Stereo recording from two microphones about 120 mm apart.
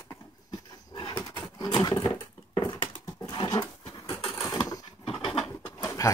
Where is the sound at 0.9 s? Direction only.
40° left (ahead or behind).